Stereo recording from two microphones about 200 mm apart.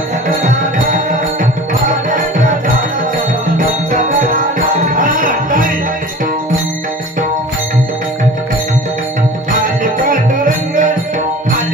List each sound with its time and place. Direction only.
0.4 s music: 40° right (ahead or behind)
3.5 s music: 45° right (ahead or behind)
9.5 s music: 45° right (ahead or behind)